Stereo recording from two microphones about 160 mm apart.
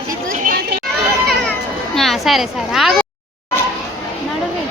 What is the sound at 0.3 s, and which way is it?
Chatter, 60° right (ahead or behind).